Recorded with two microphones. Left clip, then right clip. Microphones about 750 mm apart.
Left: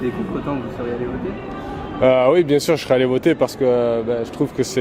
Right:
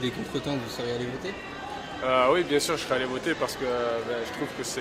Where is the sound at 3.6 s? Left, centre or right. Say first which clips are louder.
Left 15 dB; left.